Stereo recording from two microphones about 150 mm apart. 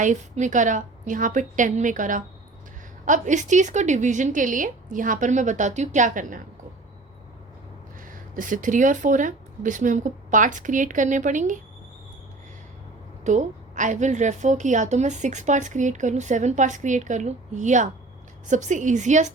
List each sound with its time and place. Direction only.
0.0 s speech: 55° right (ahead or behind)
8.1 s speech: 60° right (ahead or behind)
13.2 s a woman's voice: 55° right (ahead or behind)